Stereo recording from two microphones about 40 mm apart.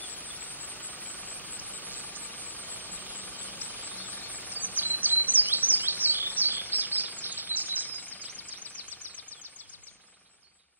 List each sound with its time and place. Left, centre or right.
1.6 s vehicle: left
4.7 s chirp: right
7.9 s a sound: left